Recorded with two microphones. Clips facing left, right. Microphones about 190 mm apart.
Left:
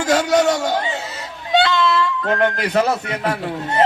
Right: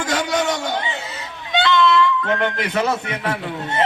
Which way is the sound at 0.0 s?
40° left (ahead or behind).